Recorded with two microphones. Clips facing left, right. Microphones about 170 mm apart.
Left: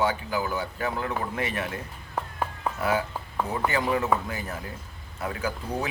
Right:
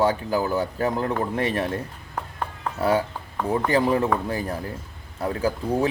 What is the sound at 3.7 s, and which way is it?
Speech, 30° right (ahead or behind).